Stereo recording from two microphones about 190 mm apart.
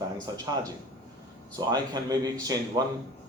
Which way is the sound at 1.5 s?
20° right (ahead or behind).